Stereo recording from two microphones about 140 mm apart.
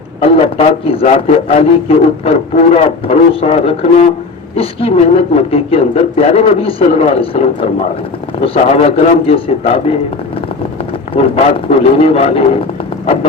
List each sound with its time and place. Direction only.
0.2 s a man's voice: 45° left (ahead or behind)
11.1 s a man's voice: 50° left (ahead or behind)